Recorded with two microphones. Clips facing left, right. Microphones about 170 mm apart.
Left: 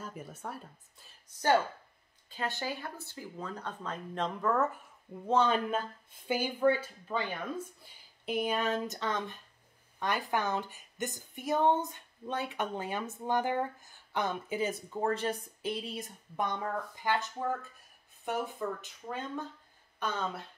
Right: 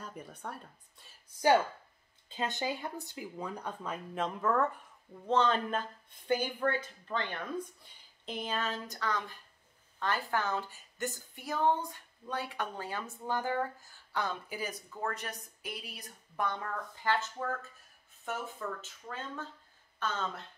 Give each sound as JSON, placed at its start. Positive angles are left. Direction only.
{"t": 0.0, "sound": "speech", "side_deg": 5}
{"t": 2.2, "sound": "speech", "side_deg": -20}
{"t": 5.2, "sound": "speech", "side_deg": 10}